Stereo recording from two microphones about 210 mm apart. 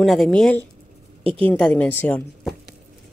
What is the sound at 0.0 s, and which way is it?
Speech, centre (ahead or behind).